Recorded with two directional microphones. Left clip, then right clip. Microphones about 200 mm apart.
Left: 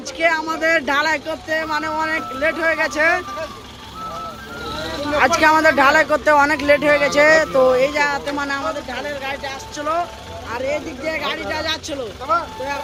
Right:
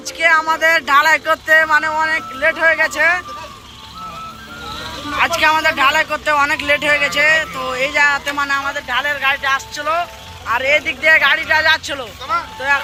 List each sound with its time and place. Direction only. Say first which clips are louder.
0.2 s speech: right 5 dB; 5° left (ahead or behind)
5.1 s speech: even; 20° left (ahead or behind)
7.8 s speech: right 3 dB; 10° left (ahead or behind)